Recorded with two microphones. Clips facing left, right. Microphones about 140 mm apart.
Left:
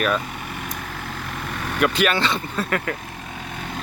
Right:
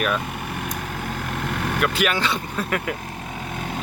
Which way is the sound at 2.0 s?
10° right (ahead or behind).